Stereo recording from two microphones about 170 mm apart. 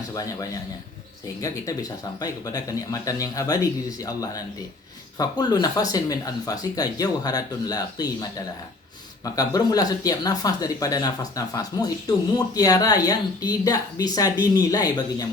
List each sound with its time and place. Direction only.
0.1 s a man's voice: 20° left (ahead or behind)